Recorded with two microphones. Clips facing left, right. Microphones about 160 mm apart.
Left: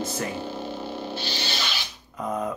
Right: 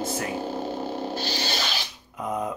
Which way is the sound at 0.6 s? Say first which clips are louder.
Right 3 dB; 45° right (ahead or behind).